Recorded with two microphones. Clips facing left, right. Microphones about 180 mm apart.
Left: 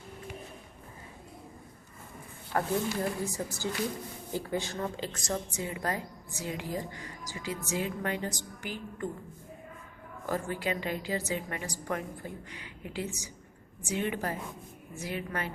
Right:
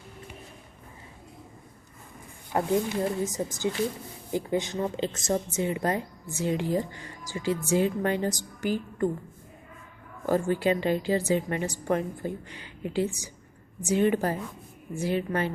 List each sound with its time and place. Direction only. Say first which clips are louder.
2.5 s a woman's voice: right 4 dB; 20° right (ahead or behind); by 9.0 s 40° right (ahead or behind)
10.2 s a woman's voice: right 8 dB; 30° right (ahead or behind)